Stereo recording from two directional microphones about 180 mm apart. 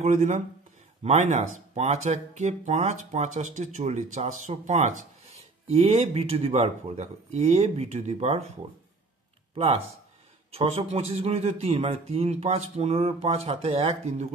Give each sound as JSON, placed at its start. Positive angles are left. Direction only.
{"t": 0.0, "sound": "speech", "side_deg": -40}
{"t": 10.5, "sound": "speech", "side_deg": -35}